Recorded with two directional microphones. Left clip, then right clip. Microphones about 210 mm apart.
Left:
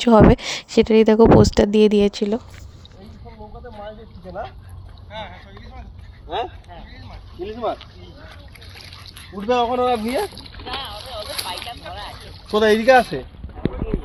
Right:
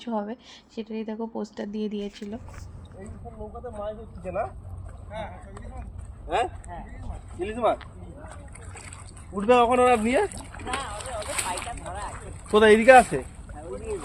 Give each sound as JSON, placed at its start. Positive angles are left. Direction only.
{"t": 0.0, "sound": "speech", "side_deg": 55}
{"t": 5.1, "sound": "speech", "side_deg": -20}
{"t": 7.4, "sound": "speech", "side_deg": -5}
{"t": 9.3, "sound": "speech", "side_deg": 0}
{"t": 11.3, "sound": "a sound", "side_deg": -35}
{"t": 12.5, "sound": "speech", "side_deg": 45}